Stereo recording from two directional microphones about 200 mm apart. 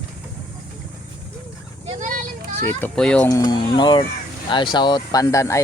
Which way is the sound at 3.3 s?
20° left (ahead or behind).